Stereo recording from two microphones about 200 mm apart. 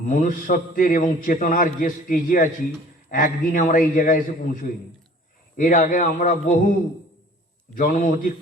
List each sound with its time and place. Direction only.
0.0 s a man's voice: 40° left (ahead or behind)
5.5 s a man's voice: 40° left (ahead or behind)
7.8 s a man's voice: 40° left (ahead or behind)